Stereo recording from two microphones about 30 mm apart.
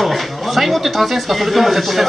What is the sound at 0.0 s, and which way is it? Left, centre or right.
A man's voice, centre.